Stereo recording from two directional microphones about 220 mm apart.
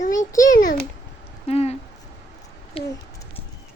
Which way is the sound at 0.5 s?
40° left (ahead or behind).